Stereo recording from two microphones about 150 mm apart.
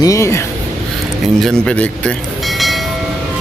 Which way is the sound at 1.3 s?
5° left (ahead or behind).